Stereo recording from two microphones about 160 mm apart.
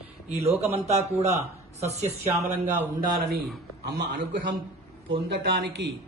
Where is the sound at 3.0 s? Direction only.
65° right (ahead or behind).